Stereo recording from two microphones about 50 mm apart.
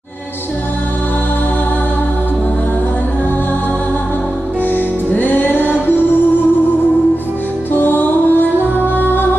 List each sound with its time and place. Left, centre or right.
4.7 s music: left
7.7 s music: left